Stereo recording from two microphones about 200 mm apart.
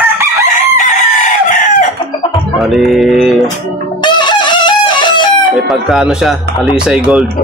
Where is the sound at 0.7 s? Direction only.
40° left (ahead or behind).